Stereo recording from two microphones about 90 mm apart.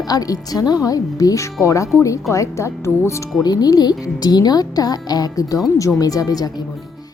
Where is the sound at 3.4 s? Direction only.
45° left (ahead or behind).